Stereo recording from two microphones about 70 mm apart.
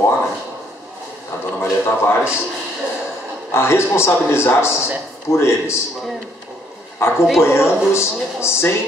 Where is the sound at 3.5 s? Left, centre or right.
Left.